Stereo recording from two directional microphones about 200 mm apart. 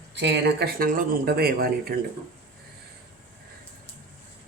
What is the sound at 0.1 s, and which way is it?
Speech, 55° right (ahead or behind).